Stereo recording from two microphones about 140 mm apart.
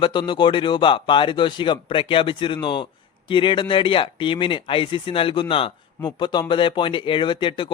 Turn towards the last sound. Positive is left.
turn(degrees=40)  # may be behind; listen again after turning